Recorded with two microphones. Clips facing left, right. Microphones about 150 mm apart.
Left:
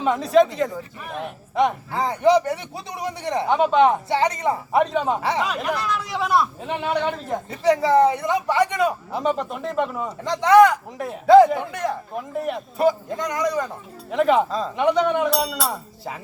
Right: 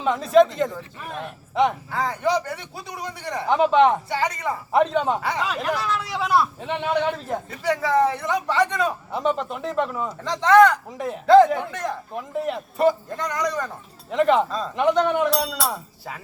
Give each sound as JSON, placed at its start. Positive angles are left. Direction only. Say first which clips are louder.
{"t": 0.0, "sound": "speech", "louder": "even", "side_deg": 0}
{"t": 1.9, "sound": "a man's voice", "louder": "left 5 dB", "side_deg": 20}
{"t": 3.4, "sound": "speech", "louder": "even", "side_deg": 0}
{"t": 4.1, "sound": "a man's voice", "louder": "left 4 dB", "side_deg": 20}
{"t": 4.7, "sound": "speech", "louder": "right 2 dB", "side_deg": 5}
{"t": 7.5, "sound": "speech", "louder": "left 5 dB", "side_deg": 20}
{"t": 9.1, "sound": "speech", "louder": "left 1 dB", "side_deg": 0}
{"t": 10.2, "sound": "speech", "louder": "left 1 dB", "side_deg": 15}
{"t": 10.9, "sound": "speech", "louder": "left 2 dB", "side_deg": 0}
{"t": 13.1, "sound": "speech", "louder": "left 2 dB", "side_deg": 10}